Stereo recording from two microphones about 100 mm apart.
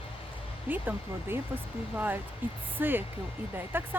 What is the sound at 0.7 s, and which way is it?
Speech, 20° right (ahead or behind).